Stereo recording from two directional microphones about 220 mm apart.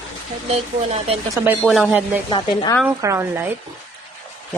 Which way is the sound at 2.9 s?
10° right (ahead or behind).